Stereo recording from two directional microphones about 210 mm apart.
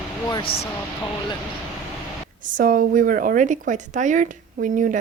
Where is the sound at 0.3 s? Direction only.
25° left (ahead or behind).